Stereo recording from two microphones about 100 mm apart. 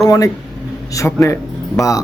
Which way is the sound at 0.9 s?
30° left (ahead or behind).